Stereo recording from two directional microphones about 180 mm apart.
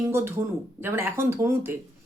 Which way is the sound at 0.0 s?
15° right (ahead or behind).